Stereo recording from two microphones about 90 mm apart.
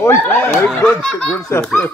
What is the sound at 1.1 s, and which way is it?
Speech, 10° left (ahead or behind).